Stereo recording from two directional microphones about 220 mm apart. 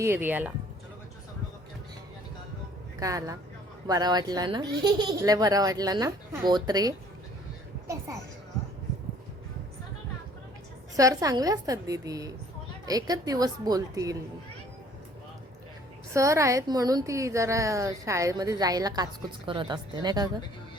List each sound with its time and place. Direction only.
0.0 s a child's voice: 10° right (ahead or behind)
3.0 s a child's voice: 15° right (ahead or behind)
10.9 s a child's voice: 15° right (ahead or behind)
16.1 s a child's voice: 15° right (ahead or behind)